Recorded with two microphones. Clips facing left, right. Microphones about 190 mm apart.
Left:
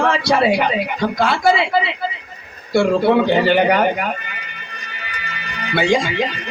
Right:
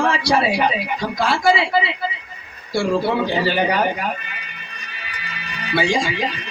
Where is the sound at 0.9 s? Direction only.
60° left (ahead or behind).